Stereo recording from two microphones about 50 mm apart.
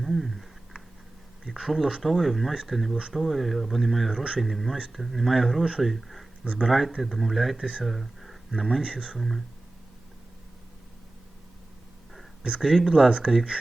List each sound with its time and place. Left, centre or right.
0.0 s a sound: centre
1.5 s speech: centre
8.8 s speech: centre
9.1 s speech: centre
12.4 s speech: centre
12.6 s speech: centre
13.1 s speech: right